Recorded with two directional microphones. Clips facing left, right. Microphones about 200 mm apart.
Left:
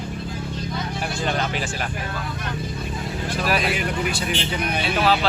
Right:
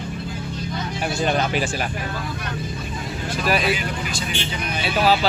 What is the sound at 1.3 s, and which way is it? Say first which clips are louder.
Speech: right 4 dB; 10° right (ahead or behind).